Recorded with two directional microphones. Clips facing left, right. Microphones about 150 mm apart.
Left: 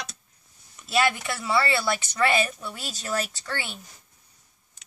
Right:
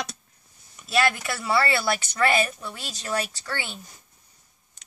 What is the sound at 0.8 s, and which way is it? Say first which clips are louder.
Speech: even; 5° right (ahead or behind).